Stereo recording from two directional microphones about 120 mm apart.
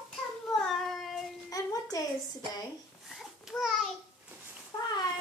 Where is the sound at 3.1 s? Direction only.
Centre (ahead or behind).